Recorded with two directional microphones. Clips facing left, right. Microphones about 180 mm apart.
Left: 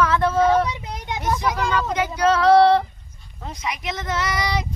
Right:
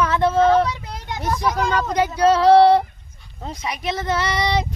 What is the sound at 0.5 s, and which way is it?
Child singing, 15° left (ahead or behind).